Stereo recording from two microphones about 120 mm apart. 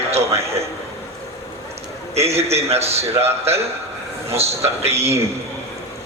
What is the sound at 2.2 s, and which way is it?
A man's voice, 60° right (ahead or behind).